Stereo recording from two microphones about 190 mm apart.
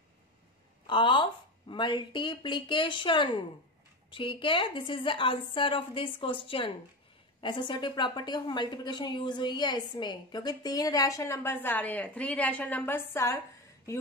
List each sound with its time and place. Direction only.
0.8 s a woman's voice: 25° left (ahead or behind)